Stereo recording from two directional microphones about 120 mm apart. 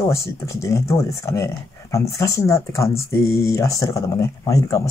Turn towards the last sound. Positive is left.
turn(degrees=25)  # may be behind; listen again after turning